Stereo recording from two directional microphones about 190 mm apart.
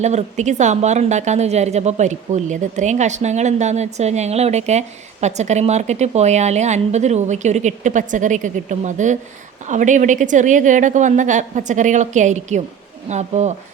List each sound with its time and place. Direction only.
0.0 s a woman's voice: 35° right (ahead or behind)